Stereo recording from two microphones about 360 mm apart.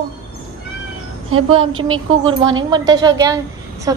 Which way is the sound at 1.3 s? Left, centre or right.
Right.